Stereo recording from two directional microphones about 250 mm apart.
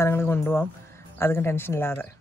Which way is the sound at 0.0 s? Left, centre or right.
Centre.